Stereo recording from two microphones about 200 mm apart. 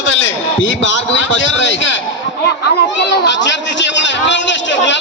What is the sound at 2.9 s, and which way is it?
A man's voice, 65° left (ahead or behind).